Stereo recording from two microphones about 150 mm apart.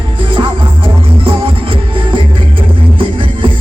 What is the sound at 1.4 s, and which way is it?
Music, 35° right (ahead or behind).